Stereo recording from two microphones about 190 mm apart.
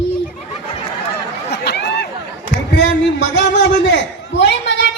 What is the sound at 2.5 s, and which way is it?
A man's voice, 70° left (ahead or behind).